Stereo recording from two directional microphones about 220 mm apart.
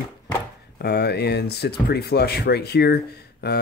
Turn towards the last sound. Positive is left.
turn(degrees=50)  # may be behind; listen again after turning